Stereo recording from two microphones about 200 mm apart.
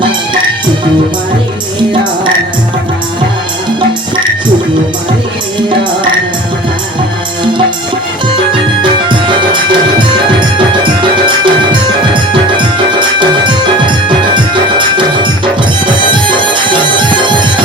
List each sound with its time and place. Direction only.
8.8 s music: 25° right (ahead or behind)
11.3 s music: 25° right (ahead or behind)
16.6 s music: 25° right (ahead or behind)